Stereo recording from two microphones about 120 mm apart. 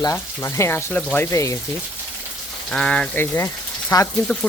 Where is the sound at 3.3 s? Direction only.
25° left (ahead or behind).